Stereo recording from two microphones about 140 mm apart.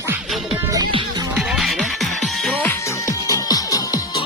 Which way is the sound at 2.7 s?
20° left (ahead or behind).